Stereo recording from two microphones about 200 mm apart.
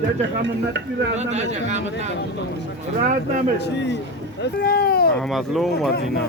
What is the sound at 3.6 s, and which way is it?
Speech, 60° left (ahead or behind).